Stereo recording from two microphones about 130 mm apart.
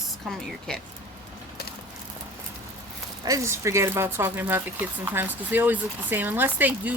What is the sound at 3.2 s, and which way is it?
Speech, 25° right (ahead or behind).